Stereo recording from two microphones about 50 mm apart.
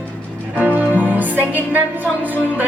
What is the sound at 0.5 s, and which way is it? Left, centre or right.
Music, right.